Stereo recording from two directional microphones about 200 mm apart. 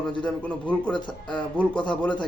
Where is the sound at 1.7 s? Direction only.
25° left (ahead or behind).